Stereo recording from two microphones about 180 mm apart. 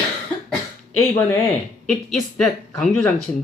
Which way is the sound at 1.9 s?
Centre (ahead or behind).